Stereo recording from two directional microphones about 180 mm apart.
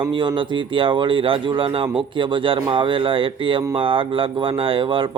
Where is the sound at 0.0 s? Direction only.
25° right (ahead or behind).